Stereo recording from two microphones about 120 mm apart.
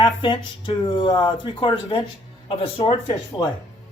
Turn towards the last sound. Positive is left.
turn(degrees=40)  # may be behind; listen again after turning